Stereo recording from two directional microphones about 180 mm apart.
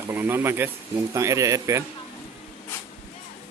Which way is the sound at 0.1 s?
10° right (ahead or behind).